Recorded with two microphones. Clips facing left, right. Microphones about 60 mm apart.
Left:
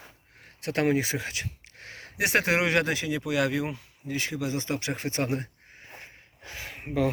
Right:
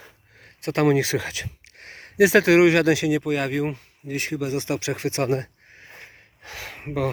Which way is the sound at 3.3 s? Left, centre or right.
Right.